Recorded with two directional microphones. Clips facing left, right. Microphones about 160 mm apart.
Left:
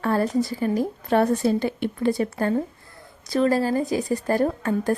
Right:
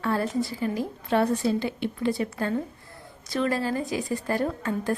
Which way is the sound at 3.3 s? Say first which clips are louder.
Left 5 dB; 35° left (ahead or behind).